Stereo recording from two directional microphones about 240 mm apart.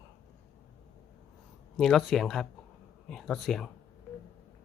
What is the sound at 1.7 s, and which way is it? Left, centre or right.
Speech, centre.